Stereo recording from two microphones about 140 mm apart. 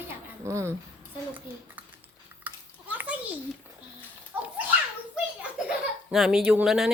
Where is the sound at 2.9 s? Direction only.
10° right (ahead or behind).